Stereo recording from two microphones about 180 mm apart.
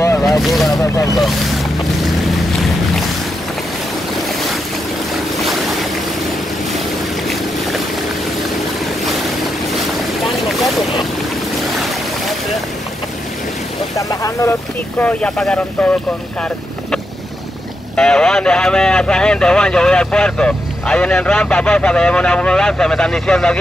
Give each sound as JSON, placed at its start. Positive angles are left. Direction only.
{"t": 0.2, "sound": "speech", "side_deg": 0}
{"t": 5.4, "sound": "boat", "side_deg": 0}
{"t": 7.2, "sound": "boat", "side_deg": 0}
{"t": 10.2, "sound": "boat", "side_deg": 0}
{"t": 13.9, "sound": "speech", "side_deg": 15}
{"t": 15.0, "sound": "speech", "side_deg": 5}
{"t": 17.9, "sound": "speech", "side_deg": 5}